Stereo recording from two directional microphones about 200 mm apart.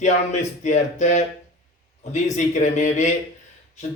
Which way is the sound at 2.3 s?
35° left (ahead or behind).